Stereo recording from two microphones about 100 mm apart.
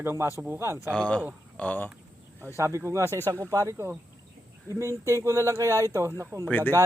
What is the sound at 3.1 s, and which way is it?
Speech, 20° left (ahead or behind).